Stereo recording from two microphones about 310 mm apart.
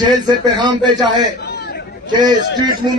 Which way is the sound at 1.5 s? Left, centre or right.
Left.